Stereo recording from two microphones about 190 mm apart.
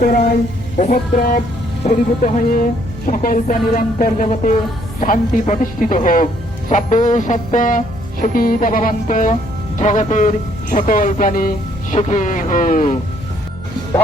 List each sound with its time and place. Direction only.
0.8 s speech: 40° left (ahead or behind)